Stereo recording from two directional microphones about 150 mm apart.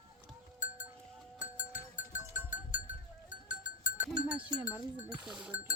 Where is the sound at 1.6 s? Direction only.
55° left (ahead or behind).